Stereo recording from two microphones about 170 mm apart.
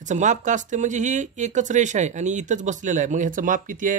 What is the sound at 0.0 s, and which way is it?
Speech, 45° right (ahead or behind).